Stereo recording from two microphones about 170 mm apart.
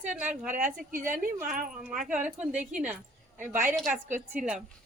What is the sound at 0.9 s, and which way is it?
Speech, 50° right (ahead or behind).